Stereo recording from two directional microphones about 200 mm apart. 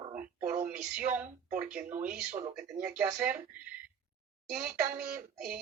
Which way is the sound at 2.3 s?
35° right (ahead or behind).